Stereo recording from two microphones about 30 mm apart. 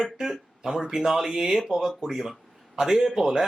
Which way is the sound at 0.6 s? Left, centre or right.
Right.